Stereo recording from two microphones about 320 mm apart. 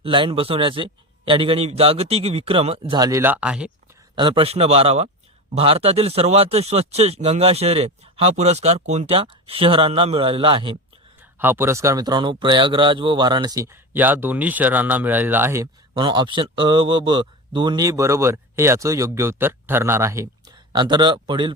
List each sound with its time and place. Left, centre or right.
0.0 s speech: centre
4.1 s speech: centre